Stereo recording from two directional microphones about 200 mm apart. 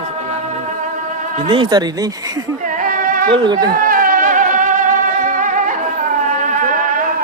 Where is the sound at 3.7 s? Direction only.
45° right (ahead or behind).